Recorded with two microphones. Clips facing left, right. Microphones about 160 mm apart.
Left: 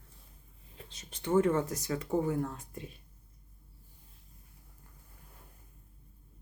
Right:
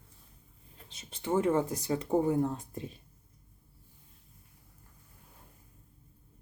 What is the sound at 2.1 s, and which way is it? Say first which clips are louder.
Speech: right 4 dB; 25° right (ahead or behind).